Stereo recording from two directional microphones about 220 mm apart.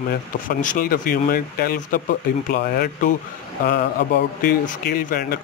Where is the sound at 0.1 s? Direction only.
40° left (ahead or behind).